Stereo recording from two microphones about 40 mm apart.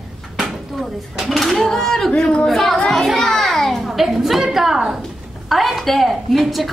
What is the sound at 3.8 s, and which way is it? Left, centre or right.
A woman's voice, centre.